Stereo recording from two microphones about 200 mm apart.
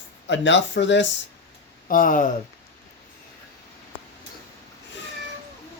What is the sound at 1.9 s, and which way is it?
Speech, 45° left (ahead or behind).